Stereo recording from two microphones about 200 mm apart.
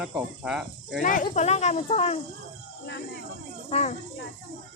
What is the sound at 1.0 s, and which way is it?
Speech, 40° left (ahead or behind).